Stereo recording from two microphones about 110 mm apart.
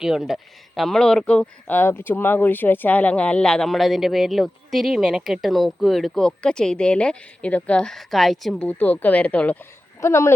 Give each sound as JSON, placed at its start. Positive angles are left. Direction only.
{"t": 0.0, "sound": "speech", "side_deg": -5}
{"t": 8.6, "sound": "speech", "side_deg": 15}
{"t": 10.0, "sound": "speech", "side_deg": 25}